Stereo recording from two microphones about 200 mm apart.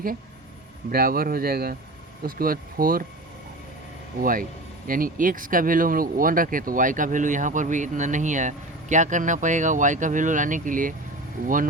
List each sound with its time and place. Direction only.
0.9 s speech: 50° right (ahead or behind)
4.2 s speech: 45° right (ahead or behind)